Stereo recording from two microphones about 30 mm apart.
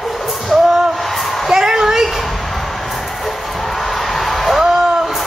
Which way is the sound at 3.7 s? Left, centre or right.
Centre.